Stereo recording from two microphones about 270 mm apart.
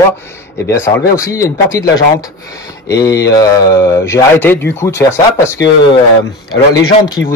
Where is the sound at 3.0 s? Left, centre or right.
Centre.